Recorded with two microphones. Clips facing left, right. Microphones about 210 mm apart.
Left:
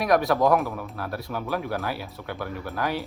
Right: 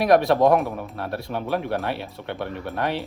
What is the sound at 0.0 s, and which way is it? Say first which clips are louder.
Speech: right 4 dB; 30° right (ahead or behind).